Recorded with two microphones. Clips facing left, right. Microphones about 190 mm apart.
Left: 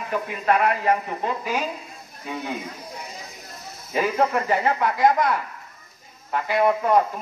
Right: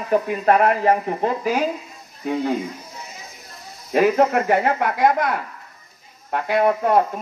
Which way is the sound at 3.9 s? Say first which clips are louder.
Right 6 dB; 60° right (ahead or behind).